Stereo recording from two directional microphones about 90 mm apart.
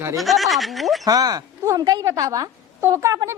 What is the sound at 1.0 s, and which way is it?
A woman's voice, 45° right (ahead or behind).